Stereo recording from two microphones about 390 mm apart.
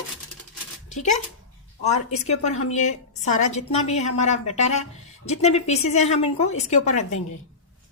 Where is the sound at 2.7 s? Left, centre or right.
Centre.